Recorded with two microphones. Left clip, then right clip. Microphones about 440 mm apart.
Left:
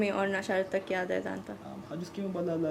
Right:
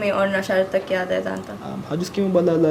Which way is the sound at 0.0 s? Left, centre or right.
Left.